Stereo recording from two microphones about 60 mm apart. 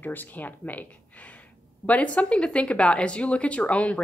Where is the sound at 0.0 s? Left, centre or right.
Left.